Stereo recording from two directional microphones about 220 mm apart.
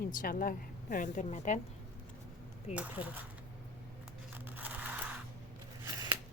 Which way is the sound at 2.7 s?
5° right (ahead or behind).